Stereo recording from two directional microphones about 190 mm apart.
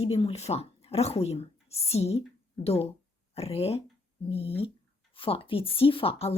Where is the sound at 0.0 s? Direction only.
30° left (ahead or behind).